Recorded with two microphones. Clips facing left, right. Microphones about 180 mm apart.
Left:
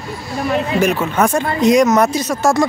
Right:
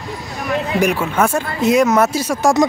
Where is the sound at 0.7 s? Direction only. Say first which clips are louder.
Right 1 dB; 10° right (ahead or behind).